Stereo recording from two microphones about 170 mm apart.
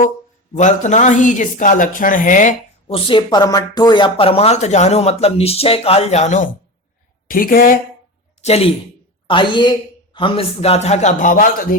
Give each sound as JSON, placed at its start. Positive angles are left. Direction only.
{"t": 0.5, "sound": "speech", "side_deg": 45}
{"t": 2.8, "sound": "speech", "side_deg": 30}
{"t": 7.3, "sound": "speech", "side_deg": 55}
{"t": 8.4, "sound": "a woman's voice", "side_deg": 40}